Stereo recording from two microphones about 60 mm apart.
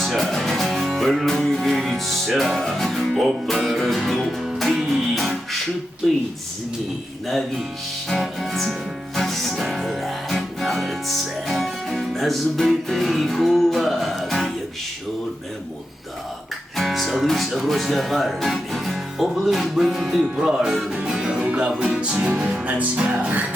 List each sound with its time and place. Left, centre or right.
0.0 s music: centre
8.1 s music: centre
16.7 s speech: centre
19.3 s music: centre; by 23.5 s right